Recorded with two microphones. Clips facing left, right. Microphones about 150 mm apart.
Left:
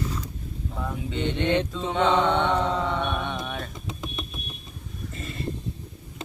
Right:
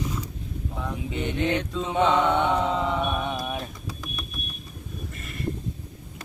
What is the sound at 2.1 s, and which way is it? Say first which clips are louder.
Mantra: left 1 dB; 25° left (ahead or behind).